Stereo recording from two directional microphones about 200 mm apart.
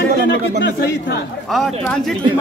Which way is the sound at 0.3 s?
60° left (ahead or behind).